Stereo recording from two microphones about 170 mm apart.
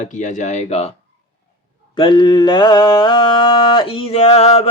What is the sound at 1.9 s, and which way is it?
Mantra, 30° left (ahead or behind).